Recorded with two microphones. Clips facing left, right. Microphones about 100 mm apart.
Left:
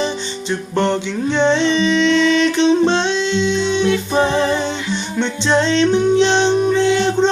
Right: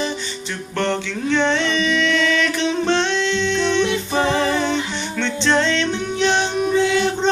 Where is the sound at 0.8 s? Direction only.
20° left (ahead or behind).